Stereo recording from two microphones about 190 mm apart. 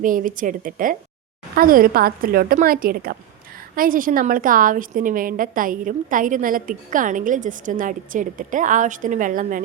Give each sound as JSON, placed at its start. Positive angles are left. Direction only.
{"t": 0.0, "sound": "a woman's voice", "side_deg": -45}